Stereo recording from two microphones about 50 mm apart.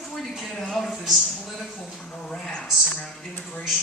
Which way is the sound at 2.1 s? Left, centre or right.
Centre.